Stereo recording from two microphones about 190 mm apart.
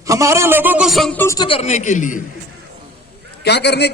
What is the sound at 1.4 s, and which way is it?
Speech, 30° left (ahead or behind).